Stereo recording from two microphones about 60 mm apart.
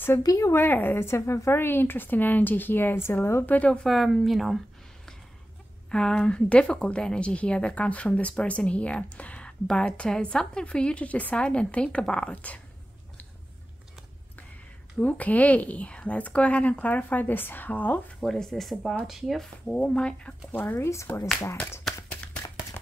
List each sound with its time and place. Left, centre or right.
0.2 s speech: left
0.5 s a woman's voice: left
3.4 s a woman's voice: left
3.8 s speech: centre
5.9 s a woman's voice: centre
15.0 s a woman's voice: left
18.2 s speech: centre
19.6 s speech: centre
20.5 s a woman's voice: left
21.9 s a sound: centre